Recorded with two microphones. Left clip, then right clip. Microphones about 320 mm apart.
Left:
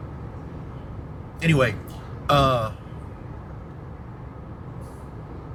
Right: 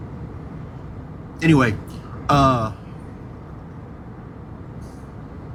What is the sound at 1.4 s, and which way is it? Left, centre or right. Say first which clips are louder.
Speech: right 4 dB; right.